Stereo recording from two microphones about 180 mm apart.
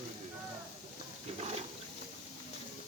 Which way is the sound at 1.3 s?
35° right (ahead or behind).